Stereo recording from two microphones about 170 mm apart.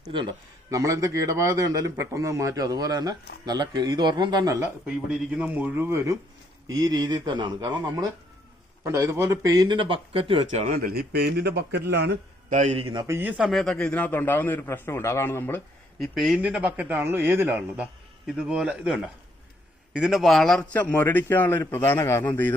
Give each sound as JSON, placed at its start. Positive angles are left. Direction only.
{"t": 0.1, "sound": "a man's voice", "side_deg": -25}
{"t": 4.9, "sound": "a man's voice", "side_deg": -5}
{"t": 10.6, "sound": "a man's voice", "side_deg": -55}
{"t": 12.5, "sound": "a man's voice", "side_deg": -45}
{"t": 13.0, "sound": "a man's voice", "side_deg": -15}
{"t": 16.0, "sound": "a man's voice", "side_deg": 0}